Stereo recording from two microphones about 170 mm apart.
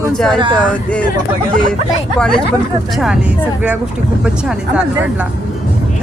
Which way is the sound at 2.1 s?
5° left (ahead or behind).